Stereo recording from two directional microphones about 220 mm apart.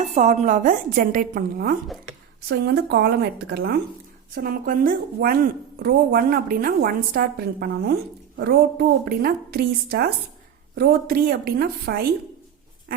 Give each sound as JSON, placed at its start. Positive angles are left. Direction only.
{"t": 0.0, "sound": "a woman's voice", "side_deg": -35}